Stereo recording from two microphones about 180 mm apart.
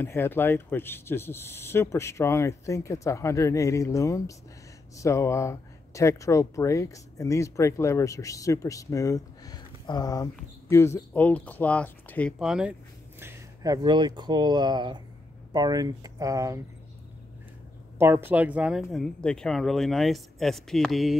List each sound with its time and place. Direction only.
0.0 s speech: 10° left (ahead or behind)
12.4 s speech: 5° right (ahead or behind)
13.2 s speech: 15° right (ahead or behind)
17.9 s speech: 15° right (ahead or behind)